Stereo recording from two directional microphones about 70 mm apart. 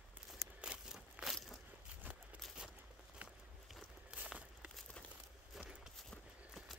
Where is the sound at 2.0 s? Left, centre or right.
Right.